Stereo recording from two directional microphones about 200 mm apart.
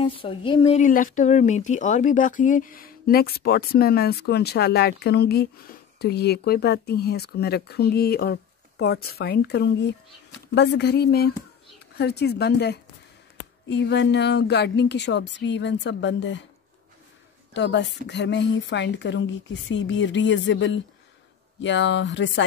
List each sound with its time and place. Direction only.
0.0 s speech: 25° left (ahead or behind)
0.7 s a woman's voice: 40° left (ahead or behind); by 16.4 s 65° left (ahead or behind)
17.6 s a woman's voice: 60° left (ahead or behind)